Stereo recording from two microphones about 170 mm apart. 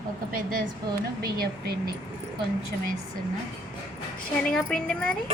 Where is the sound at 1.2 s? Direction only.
65° right (ahead or behind).